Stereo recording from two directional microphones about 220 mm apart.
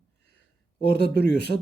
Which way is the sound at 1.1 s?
50° left (ahead or behind).